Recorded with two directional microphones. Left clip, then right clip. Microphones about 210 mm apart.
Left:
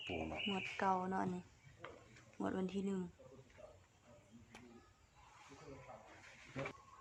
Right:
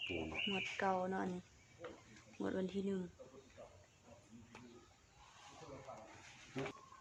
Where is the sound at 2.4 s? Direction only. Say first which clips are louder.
Right 1 dB; 25° left (ahead or behind).